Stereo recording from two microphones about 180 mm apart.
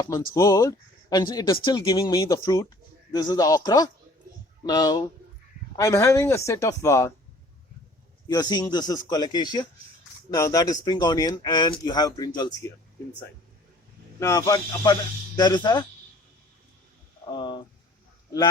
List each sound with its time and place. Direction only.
0.3 s speech: 20° left (ahead or behind)
8.3 s speech: 20° left (ahead or behind)
14.2 s speech: 20° left (ahead or behind)
17.3 s a sound: 25° left (ahead or behind)